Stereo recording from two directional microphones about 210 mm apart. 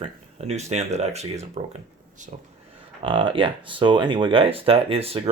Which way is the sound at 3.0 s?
25° right (ahead or behind).